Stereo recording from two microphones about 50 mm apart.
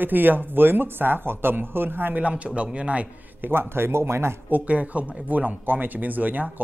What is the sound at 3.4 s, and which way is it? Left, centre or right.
Speech, right.